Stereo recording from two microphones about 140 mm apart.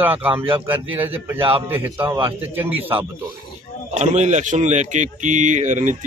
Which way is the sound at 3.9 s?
60° right (ahead or behind).